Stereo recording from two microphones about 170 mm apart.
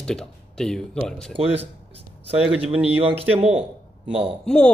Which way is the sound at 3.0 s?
35° right (ahead or behind).